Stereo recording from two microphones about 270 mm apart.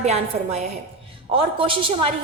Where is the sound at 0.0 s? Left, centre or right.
Right.